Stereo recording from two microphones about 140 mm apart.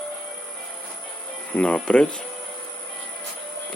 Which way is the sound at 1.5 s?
10° left (ahead or behind).